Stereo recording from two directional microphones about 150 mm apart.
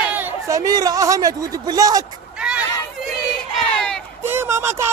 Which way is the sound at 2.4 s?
5° right (ahead or behind).